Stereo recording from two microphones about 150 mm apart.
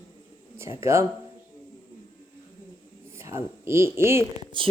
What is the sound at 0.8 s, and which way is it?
Speech, 20° right (ahead or behind).